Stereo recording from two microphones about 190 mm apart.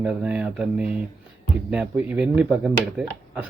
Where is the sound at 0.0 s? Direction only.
5° right (ahead or behind).